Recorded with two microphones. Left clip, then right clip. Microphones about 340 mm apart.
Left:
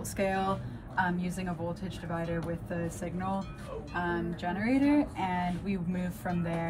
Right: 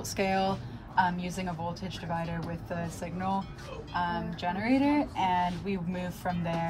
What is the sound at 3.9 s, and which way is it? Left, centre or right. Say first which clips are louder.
A woman's voice: right 2 dB; centre.